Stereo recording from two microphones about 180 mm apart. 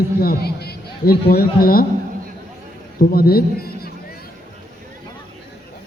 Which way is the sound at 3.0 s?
55° left (ahead or behind).